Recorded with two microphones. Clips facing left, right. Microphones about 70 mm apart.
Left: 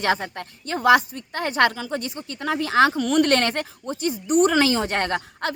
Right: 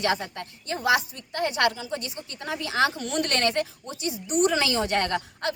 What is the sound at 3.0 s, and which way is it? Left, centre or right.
Speech, left.